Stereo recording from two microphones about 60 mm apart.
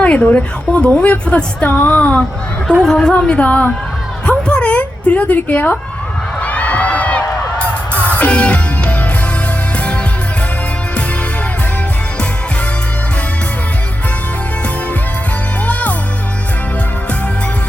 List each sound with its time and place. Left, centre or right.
0.0 s a woman's voice: left
2.8 s speech: centre
4.3 s a sound: centre
6.4 s crowd: left
7.9 s music: left
15.6 s music: left